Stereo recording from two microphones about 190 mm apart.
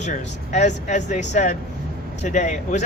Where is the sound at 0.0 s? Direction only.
40° left (ahead or behind).